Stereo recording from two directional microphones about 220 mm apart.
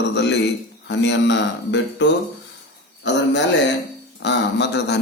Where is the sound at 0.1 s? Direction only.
50° left (ahead or behind).